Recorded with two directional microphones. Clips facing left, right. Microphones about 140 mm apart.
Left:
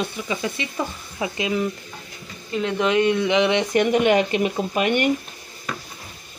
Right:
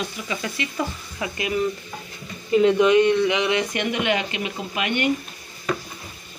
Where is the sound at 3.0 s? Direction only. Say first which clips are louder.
Right 1 dB; 15° left (ahead or behind).